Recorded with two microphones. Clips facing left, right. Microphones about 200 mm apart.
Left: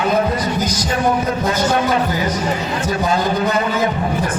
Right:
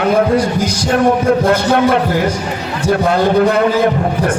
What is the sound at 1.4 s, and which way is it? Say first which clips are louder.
A man's voice: right 5 dB; 65° right (ahead or behind).